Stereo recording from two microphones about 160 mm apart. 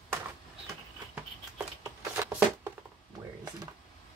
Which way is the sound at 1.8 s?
15° right (ahead or behind).